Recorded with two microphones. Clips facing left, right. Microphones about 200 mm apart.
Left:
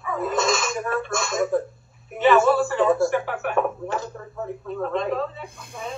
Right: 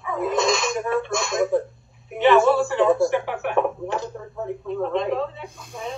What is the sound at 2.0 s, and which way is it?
Speech, centre (ahead or behind).